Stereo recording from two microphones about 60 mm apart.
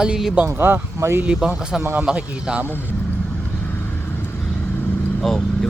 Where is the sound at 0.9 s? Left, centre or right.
Right.